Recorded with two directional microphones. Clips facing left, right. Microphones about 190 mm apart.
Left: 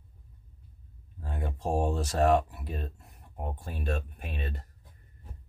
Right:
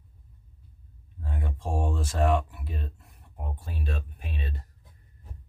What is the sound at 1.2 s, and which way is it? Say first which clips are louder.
Speech: left 2 dB; 40° left (ahead or behind).